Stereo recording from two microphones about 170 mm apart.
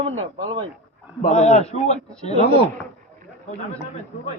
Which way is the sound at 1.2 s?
40° left (ahead or behind).